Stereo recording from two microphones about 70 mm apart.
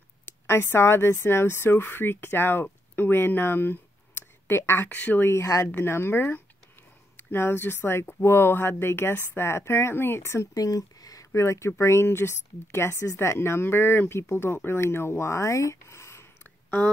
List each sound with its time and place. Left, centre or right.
0.5 s speech: left
5.2 s speech: left
10.5 s speech: left